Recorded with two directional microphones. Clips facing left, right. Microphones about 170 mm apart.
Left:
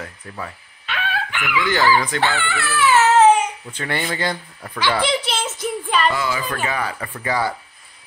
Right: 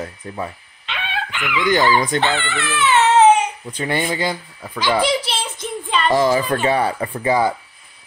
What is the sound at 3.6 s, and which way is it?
A child's voice, 15° right (ahead or behind).